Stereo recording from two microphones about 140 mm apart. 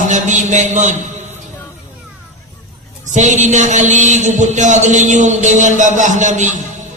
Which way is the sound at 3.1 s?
60° right (ahead or behind).